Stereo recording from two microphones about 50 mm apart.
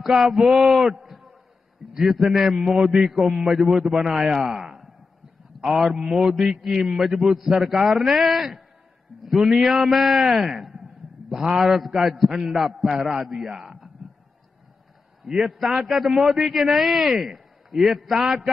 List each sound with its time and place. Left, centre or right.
0.0 s a man's voice: centre
15.4 s a man's voice: centre